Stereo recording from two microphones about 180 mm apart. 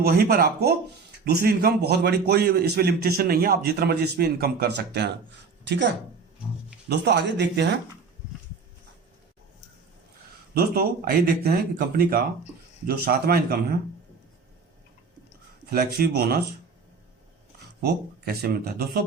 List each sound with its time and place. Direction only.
0.0 s a man's voice: 60° right (ahead or behind)
6.8 s speech: 70° right (ahead or behind)
10.5 s a man's voice: 55° right (ahead or behind)
15.7 s a man's voice: 60° right (ahead or behind)
18.4 s a man's voice: 55° right (ahead or behind)